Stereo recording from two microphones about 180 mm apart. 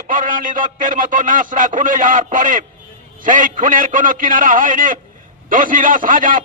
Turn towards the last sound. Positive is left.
turn(degrees=-50)  # may be behind; listen again after turning